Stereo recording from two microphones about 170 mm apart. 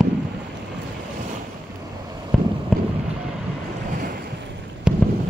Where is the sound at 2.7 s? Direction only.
Centre (ahead or behind).